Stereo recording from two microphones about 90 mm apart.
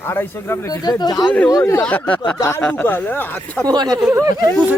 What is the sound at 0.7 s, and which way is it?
Speech, 50° left (ahead or behind).